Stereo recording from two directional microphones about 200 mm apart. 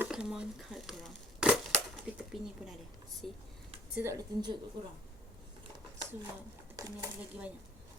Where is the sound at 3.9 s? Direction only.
15° right (ahead or behind).